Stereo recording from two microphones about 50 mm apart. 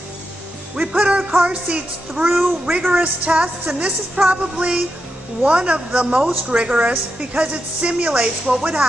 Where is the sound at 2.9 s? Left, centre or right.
Right.